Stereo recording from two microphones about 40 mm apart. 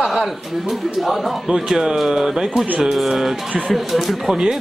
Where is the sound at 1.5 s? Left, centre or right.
Centre.